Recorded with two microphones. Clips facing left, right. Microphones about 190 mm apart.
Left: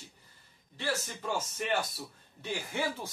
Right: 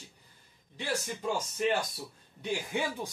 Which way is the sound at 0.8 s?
15° right (ahead or behind).